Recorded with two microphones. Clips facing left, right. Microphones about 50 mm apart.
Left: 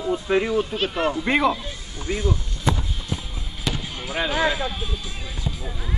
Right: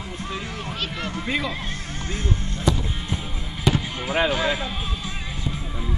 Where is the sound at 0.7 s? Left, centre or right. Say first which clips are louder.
Left 7 dB; left.